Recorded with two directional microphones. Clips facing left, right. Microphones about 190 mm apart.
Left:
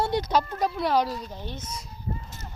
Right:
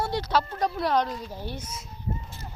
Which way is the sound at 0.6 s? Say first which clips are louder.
Left 1 dB; 5° left (ahead or behind).